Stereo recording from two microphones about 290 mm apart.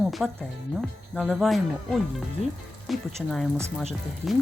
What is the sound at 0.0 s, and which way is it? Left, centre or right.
Music, centre.